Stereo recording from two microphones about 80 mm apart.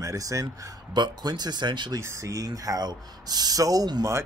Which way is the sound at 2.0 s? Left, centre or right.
Right.